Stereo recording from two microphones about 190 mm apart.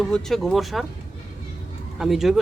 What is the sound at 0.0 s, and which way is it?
Speech, 5° left (ahead or behind).